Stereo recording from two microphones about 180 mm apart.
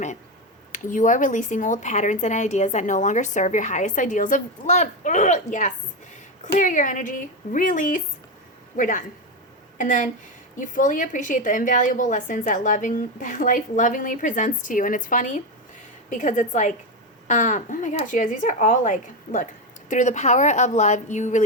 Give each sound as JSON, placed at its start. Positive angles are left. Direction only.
{"t": 0.7, "sound": "a woman's voice", "side_deg": 45}